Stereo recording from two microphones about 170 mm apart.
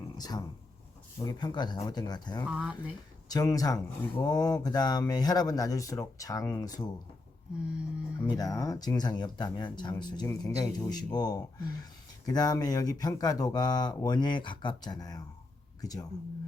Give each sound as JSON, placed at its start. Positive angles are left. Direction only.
{"t": 0.2, "sound": "speech", "side_deg": 20}
{"t": 2.5, "sound": "speech", "side_deg": -5}
{"t": 3.2, "sound": "speech", "side_deg": 20}
{"t": 7.5, "sound": "a sound", "side_deg": -5}
{"t": 8.2, "sound": "speech", "side_deg": 20}